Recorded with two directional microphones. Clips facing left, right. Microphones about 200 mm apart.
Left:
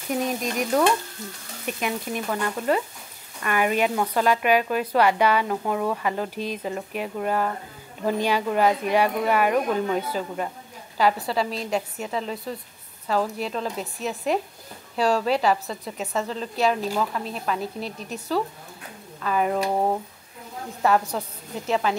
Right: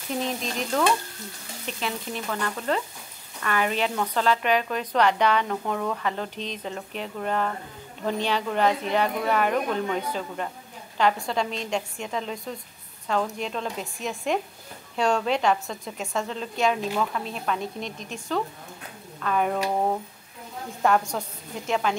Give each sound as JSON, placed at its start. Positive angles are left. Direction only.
{"t": 0.1, "sound": "a woman's voice", "side_deg": 10}
{"t": 17.8, "sound": "speech", "side_deg": 35}
{"t": 19.2, "sound": "a woman's voice", "side_deg": 5}
{"t": 20.8, "sound": "a woman's voice", "side_deg": 5}